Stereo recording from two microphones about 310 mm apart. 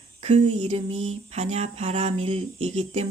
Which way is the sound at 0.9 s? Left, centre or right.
Right.